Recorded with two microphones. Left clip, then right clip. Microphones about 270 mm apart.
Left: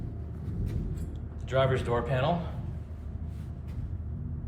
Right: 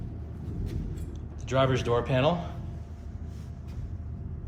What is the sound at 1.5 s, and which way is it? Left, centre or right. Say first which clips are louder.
Speech: right 1 dB; centre.